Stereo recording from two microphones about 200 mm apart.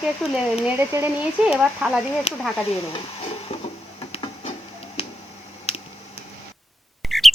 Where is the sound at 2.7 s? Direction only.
30° left (ahead or behind).